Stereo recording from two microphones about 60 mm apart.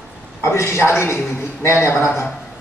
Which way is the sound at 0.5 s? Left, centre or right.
Left.